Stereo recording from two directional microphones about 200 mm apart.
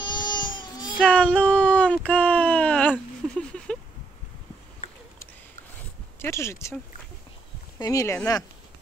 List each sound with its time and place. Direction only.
0.0 s baby cry: 20° left (ahead or behind)
1.0 s a sound: 5° left (ahead or behind)
6.1 s speech: 15° left (ahead or behind)
7.8 s speech: 15° left (ahead or behind)